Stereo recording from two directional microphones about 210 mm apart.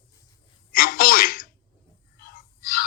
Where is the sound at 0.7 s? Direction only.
45° left (ahead or behind).